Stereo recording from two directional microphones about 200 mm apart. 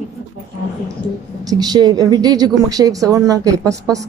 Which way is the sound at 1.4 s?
20° right (ahead or behind).